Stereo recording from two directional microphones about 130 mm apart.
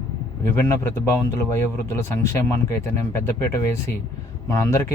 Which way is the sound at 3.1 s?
20° left (ahead or behind).